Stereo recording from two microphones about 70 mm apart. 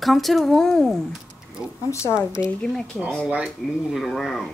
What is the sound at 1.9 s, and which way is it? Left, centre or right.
Speech, left.